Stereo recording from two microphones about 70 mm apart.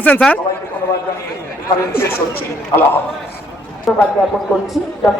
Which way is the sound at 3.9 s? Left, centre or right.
Centre.